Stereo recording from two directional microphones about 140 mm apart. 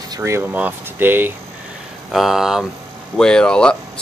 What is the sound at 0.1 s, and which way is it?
Speech, 20° right (ahead or behind).